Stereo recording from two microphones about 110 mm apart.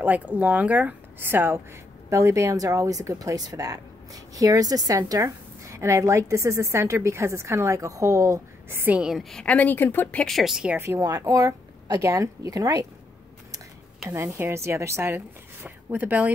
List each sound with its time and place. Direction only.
0.0 s speech: 15° right (ahead or behind); by 10.2 s 20° left (ahead or behind)
10.2 s speech: centre (ahead or behind)
10.8 s speech: 25° right (ahead or behind)
14.0 s speech: 25° right (ahead or behind)